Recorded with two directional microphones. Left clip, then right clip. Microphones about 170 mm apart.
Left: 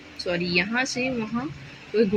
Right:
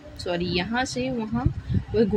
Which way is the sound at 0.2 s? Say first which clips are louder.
Left 2 dB; 5° right (ahead or behind).